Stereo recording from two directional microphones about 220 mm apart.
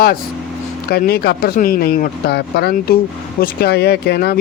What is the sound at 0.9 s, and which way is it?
Speech, 45° left (ahead or behind).